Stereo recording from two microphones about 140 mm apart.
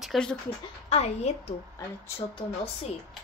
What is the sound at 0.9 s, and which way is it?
Speech, 50° left (ahead or behind).